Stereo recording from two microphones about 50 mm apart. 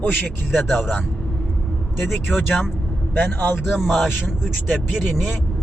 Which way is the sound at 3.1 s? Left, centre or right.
Left.